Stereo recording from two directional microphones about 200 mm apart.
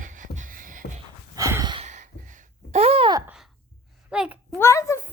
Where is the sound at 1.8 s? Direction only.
35° right (ahead or behind).